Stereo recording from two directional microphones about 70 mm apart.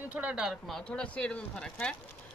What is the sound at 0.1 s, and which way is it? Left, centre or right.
Speech, right.